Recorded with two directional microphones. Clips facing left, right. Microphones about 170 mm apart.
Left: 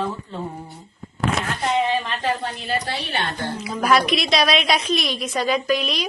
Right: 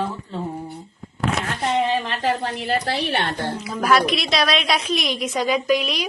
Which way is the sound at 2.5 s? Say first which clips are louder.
Right 3 dB; 65° right (ahead or behind).